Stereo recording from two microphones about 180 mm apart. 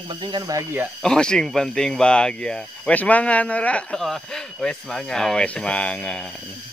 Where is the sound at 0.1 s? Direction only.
25° right (ahead or behind).